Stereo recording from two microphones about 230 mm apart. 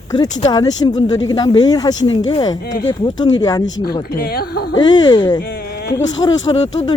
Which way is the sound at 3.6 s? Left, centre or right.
Left.